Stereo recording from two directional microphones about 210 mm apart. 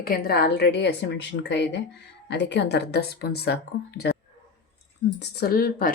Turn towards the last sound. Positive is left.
turn(degrees=45)  # may be behind; listen again after turning